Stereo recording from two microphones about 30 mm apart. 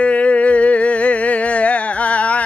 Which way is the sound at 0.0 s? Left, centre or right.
Left.